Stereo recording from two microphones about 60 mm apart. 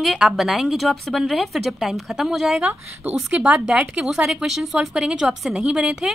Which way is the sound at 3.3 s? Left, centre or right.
Centre.